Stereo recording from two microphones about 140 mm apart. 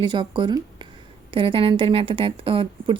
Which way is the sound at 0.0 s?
35° right (ahead or behind).